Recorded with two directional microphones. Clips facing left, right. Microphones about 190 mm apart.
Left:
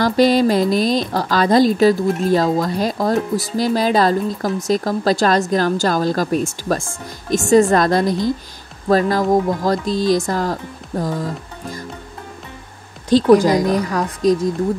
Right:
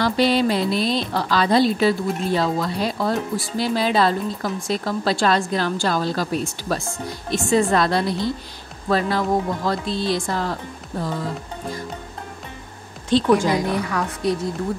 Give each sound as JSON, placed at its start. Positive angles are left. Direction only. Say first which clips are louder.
{"t": 0.0, "sound": "speech", "louder": "left 5 dB", "side_deg": 45}
{"t": 13.1, "sound": "speech", "louder": "left 6 dB", "side_deg": 40}
{"t": 14.2, "sound": "speech", "louder": "left 8 dB", "side_deg": 90}